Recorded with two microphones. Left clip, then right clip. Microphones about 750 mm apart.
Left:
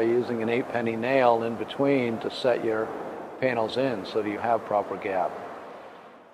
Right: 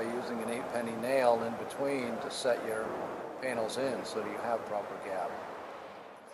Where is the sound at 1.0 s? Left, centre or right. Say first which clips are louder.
Left 6 dB; left.